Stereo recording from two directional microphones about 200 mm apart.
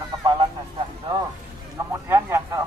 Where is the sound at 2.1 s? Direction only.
15° right (ahead or behind).